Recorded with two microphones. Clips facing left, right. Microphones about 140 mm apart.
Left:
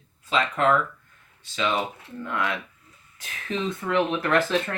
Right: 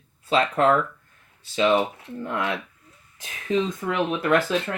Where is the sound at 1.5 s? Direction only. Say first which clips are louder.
Right 6 dB; 25° right (ahead or behind).